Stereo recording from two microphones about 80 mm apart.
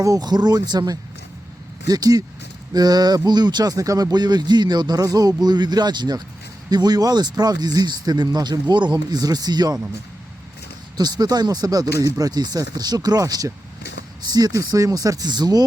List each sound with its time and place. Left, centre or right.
0.0 s speech: right
0.3 s speech: right
10.9 s speech: right